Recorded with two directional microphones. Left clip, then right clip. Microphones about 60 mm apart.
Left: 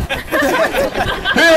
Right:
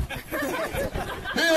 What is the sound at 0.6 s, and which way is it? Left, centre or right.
Chatter, left.